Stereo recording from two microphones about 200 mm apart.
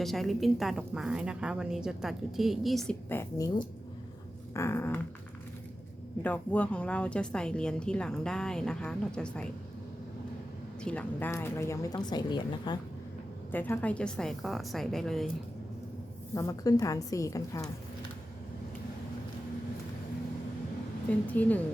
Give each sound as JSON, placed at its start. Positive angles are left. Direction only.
{"t": 0.0, "sound": "a woman's voice", "side_deg": 0}
{"t": 6.2, "sound": "a woman's voice", "side_deg": 5}
{"t": 10.8, "sound": "a woman's voice", "side_deg": 10}
{"t": 13.5, "sound": "a woman's voice", "side_deg": 10}
{"t": 16.3, "sound": "a woman's voice", "side_deg": 15}
{"t": 21.1, "sound": "a woman's voice", "side_deg": 5}